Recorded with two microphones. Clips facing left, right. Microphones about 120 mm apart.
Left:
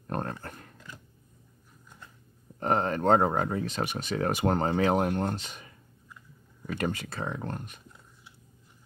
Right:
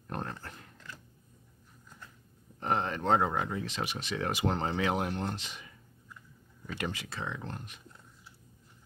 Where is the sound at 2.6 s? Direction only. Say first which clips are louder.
Left 5 dB; 45° left (ahead or behind).